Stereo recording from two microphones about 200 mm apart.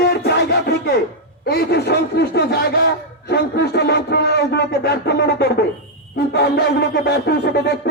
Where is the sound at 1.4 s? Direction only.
55° left (ahead or behind).